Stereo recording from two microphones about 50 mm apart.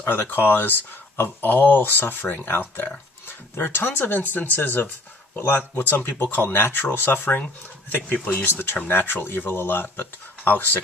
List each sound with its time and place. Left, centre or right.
0.0 s speech: left
8.4 s speech: left